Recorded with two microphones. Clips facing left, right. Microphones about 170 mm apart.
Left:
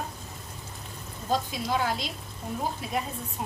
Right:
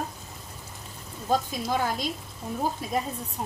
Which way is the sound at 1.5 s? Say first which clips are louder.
Right 1 dB; 45° right (ahead or behind).